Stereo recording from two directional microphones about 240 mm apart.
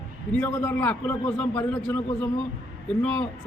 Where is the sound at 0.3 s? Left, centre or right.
Centre.